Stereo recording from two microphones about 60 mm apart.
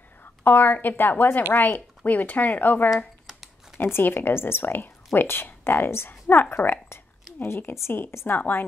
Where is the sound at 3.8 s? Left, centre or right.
Left.